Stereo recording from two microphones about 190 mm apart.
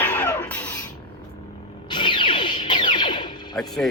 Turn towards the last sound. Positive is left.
turn(degrees=0)  # may be behind; listen again after turning